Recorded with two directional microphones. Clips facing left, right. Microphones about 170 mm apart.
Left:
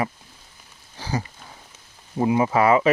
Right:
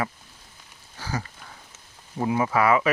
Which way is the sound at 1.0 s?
20° left (ahead or behind).